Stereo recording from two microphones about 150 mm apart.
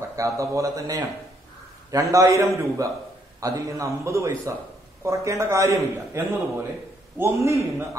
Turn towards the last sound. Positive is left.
turn(degrees=-20)  # may be behind; listen again after turning